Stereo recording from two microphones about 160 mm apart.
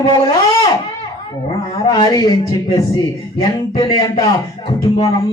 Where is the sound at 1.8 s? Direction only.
25° left (ahead or behind).